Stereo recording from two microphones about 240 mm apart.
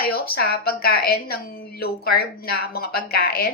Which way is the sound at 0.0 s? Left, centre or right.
Left.